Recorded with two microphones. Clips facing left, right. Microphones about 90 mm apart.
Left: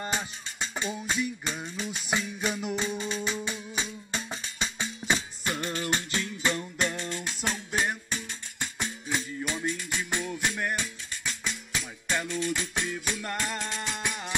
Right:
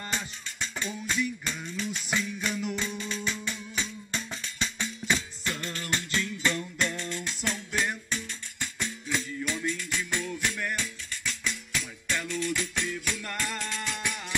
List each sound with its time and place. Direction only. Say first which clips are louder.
0.0 s music: left 3 dB; 20° left (ahead or behind)